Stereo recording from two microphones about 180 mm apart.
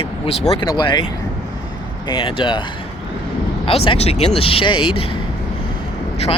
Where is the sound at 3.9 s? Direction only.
35° left (ahead or behind).